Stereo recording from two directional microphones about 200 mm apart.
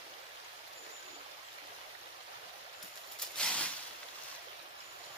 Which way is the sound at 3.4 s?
5° left (ahead or behind).